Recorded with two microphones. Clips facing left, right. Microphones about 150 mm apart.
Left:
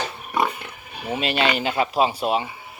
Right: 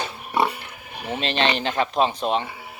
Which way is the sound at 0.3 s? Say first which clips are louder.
Right 1 dB; 30° right (ahead or behind).